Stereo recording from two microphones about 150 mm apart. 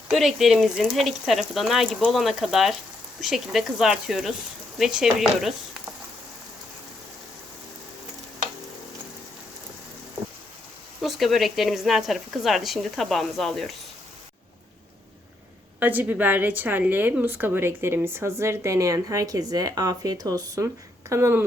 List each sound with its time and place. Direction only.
0.1 s speech: centre (ahead or behind)
11.0 s speech: centre (ahead or behind)
15.8 s a woman's voice: 10° right (ahead or behind)